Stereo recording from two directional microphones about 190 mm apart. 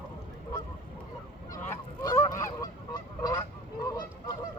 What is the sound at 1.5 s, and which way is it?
Goose, 15° left (ahead or behind).